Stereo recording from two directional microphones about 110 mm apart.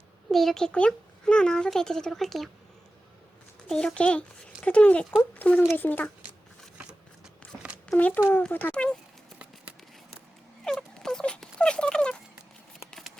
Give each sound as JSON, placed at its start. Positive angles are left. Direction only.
{"t": 0.3, "sound": "a child's voice", "side_deg": 0}
{"t": 3.7, "sound": "speech", "side_deg": 5}
{"t": 7.9, "sound": "speech", "side_deg": 15}
{"t": 10.6, "sound": "a sound", "side_deg": 5}